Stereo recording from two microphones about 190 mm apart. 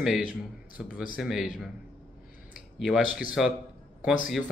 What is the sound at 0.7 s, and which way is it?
Speech, 5° right (ahead or behind).